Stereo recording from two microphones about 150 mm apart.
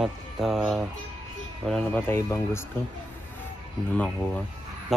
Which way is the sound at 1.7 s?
10° left (ahead or behind).